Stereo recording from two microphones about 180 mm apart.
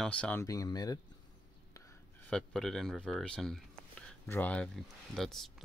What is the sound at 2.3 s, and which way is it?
Speech, 5° left (ahead or behind).